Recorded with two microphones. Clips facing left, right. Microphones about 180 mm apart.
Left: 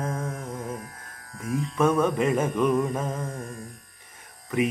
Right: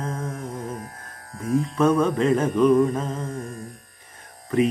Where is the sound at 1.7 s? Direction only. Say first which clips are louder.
Right 1 dB; 10° left (ahead or behind).